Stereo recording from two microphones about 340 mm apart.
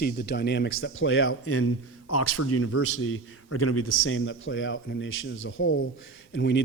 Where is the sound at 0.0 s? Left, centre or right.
Left.